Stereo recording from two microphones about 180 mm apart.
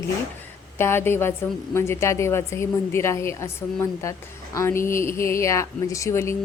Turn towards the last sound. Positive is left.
turn(degrees=15)  # may be behind; listen again after turning